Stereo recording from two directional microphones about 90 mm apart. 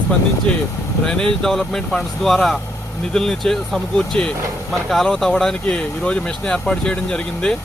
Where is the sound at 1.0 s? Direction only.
5° left (ahead or behind).